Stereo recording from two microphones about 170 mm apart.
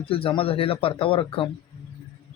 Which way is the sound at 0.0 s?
35° left (ahead or behind).